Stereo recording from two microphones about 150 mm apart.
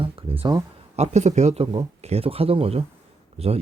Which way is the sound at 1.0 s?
50° right (ahead or behind).